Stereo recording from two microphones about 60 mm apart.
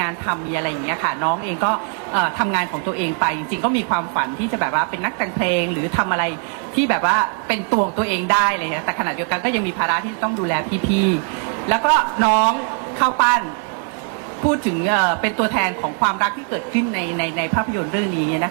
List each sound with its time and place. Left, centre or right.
0.0 s a woman's voice: right
14.4 s a woman's voice: right